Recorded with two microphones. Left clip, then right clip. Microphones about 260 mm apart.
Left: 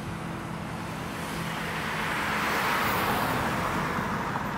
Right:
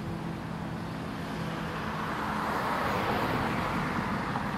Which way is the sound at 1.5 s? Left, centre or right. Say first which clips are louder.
Left 5 dB; left.